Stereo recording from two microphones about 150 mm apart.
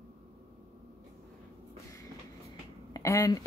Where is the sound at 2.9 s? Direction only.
20° left (ahead or behind).